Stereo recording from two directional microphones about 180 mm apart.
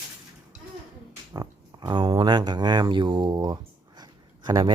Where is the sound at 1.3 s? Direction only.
20° right (ahead or behind).